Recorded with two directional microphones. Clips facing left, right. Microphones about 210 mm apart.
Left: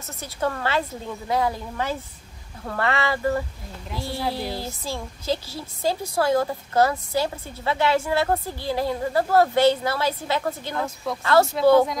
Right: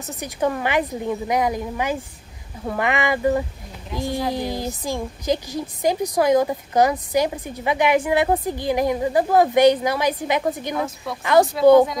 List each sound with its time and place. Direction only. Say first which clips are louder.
0.0 s a woman's voice: right 4 dB; 15° right (ahead or behind)